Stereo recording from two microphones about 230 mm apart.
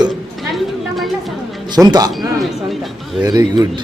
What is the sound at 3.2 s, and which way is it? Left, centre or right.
Speech, centre.